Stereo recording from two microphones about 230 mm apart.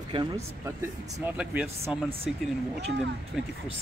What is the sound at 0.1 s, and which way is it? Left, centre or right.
Speech, centre.